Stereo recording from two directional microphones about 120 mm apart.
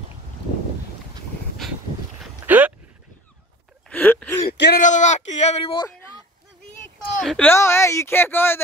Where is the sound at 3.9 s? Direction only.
15° left (ahead or behind).